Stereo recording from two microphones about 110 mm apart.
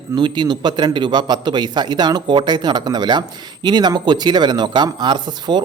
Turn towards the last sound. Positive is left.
turn(degrees=-40)  # may be behind; listen again after turning